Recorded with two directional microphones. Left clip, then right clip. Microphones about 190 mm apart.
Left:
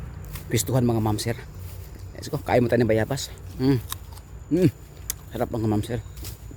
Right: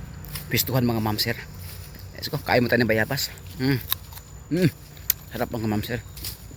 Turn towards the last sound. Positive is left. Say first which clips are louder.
# right 1 dB
turn(degrees=15)  # may be behind; listen again after turning